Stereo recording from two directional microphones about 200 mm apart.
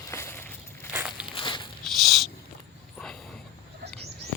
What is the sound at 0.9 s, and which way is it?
Walk, 5° right (ahead or behind).